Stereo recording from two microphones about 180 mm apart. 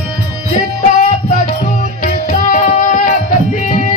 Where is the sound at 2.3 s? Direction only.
45° left (ahead or behind).